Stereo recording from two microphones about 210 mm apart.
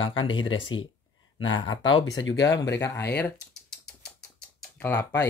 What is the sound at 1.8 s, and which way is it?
Speech, 70° left (ahead or behind).